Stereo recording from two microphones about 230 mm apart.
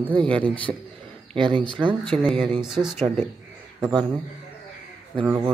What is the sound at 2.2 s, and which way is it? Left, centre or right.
Speech, centre.